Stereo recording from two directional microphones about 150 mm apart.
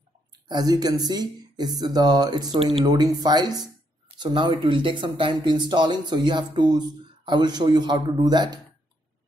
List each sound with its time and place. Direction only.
0.5 s speech: 25° right (ahead or behind)